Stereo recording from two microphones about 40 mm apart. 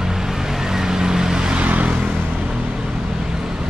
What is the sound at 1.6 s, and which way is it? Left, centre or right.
Vehicle, right.